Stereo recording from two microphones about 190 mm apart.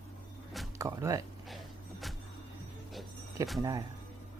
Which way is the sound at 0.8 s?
15° right (ahead or behind).